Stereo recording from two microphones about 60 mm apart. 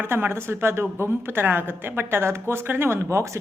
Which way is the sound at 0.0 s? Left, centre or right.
Right.